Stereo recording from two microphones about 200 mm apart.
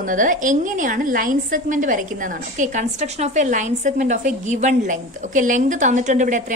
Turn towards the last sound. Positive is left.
turn(degrees=-40)  # may be behind; listen again after turning